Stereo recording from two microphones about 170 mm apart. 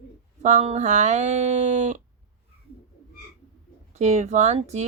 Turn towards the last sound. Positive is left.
turn(degrees=-40)  # may be behind; listen again after turning